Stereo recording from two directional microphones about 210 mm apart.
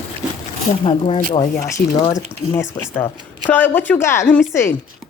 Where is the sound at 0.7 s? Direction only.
25° left (ahead or behind).